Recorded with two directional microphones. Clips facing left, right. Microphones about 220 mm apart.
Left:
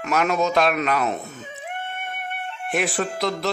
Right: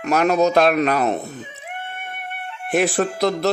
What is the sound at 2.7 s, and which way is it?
Speech, 40° right (ahead or behind).